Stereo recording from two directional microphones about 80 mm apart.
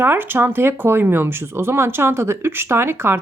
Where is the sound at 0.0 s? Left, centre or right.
Right.